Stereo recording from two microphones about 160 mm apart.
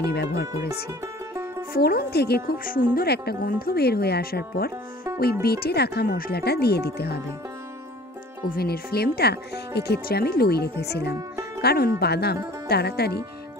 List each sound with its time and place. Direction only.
0.1 s speech: 90° left
1.7 s a woman's voice: 70° left (ahead or behind)
8.5 s speech: 70° left (ahead or behind); by 11.1 s 90° left
11.1 s music: 20° right (ahead or behind)
11.6 s a woman's voice: 75° left (ahead or behind)
12.0 s speech: 90° left